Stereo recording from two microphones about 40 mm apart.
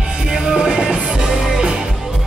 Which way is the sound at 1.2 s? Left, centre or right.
Centre.